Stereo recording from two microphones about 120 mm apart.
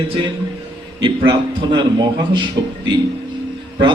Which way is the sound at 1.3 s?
40° right (ahead or behind).